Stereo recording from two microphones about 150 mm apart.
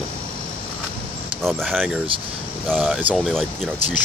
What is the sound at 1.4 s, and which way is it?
Speech, centre (ahead or behind).